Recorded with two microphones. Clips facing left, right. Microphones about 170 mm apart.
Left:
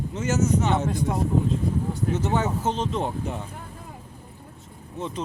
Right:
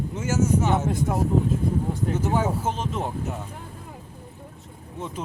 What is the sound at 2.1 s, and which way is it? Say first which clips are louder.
Speech: right 1 dB; 10° right (ahead or behind).